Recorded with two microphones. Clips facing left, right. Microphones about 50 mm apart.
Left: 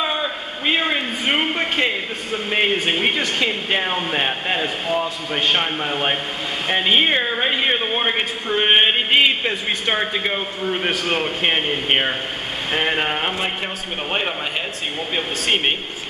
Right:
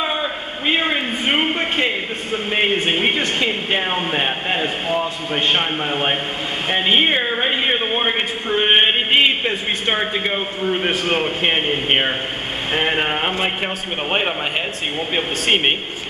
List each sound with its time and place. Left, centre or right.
0.0 s a sound: centre
2.3 s speech: centre
15.1 s speech: centre